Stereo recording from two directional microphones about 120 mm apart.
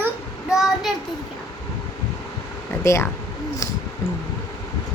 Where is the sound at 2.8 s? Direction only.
25° left (ahead or behind).